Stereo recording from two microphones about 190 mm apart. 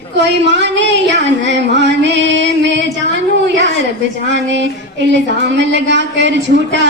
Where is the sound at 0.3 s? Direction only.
70° right (ahead or behind).